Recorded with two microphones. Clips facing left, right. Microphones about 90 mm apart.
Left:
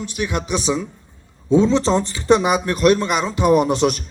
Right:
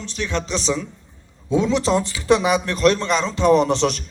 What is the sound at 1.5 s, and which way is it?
Speech, 30° left (ahead or behind).